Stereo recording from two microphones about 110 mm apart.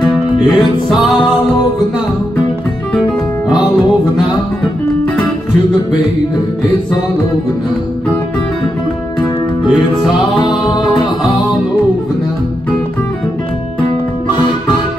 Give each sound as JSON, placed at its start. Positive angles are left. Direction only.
{"t": 0.0, "sound": "music", "side_deg": 5}